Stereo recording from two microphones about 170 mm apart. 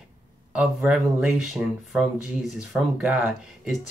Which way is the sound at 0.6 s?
5° right (ahead or behind).